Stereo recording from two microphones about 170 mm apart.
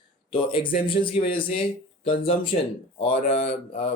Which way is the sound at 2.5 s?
45° left (ahead or behind).